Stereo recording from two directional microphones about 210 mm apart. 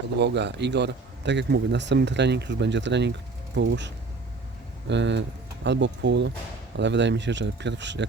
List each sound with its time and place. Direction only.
0.2 s a man's voice: 55° right (ahead or behind)